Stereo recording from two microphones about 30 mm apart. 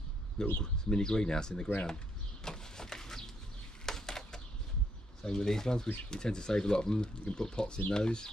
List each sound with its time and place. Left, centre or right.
0.4 s speech: left
2.4 s a sound: left
5.2 s speech: left